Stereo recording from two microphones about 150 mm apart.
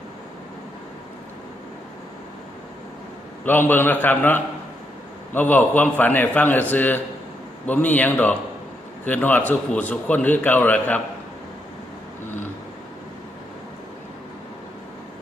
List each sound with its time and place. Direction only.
3.4 s a man's voice: 15° left (ahead or behind)